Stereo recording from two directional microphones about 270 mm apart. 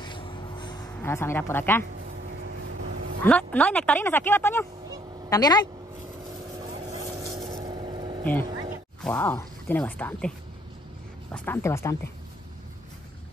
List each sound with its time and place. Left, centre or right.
0.0 s a sound: centre
2.4 s vehicle: right
3.3 s speech: centre
7.0 s vehicle: centre
8.2 s speech: centre
11.3 s speech: centre